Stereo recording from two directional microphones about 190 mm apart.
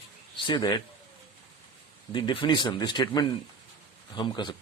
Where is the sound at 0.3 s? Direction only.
25° left (ahead or behind).